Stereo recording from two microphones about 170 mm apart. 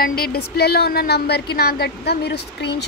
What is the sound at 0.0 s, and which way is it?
Speech, 60° left (ahead or behind).